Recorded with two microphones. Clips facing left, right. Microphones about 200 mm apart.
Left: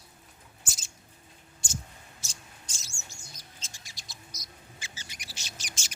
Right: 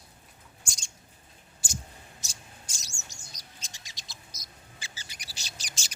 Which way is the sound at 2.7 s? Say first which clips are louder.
Even; 15° right (ahead or behind).